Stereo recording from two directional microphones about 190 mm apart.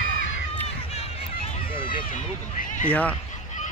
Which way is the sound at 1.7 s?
25° left (ahead or behind).